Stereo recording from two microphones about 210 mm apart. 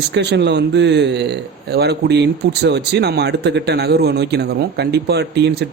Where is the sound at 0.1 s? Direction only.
55° right (ahead or behind).